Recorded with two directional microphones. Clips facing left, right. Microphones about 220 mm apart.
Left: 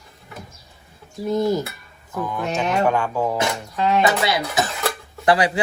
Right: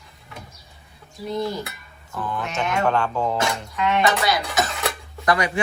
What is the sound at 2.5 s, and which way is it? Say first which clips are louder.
Speech: left 4 dB; 35° left (ahead or behind).